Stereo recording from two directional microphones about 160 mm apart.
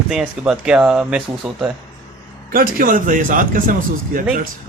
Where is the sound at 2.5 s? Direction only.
60° right (ahead or behind).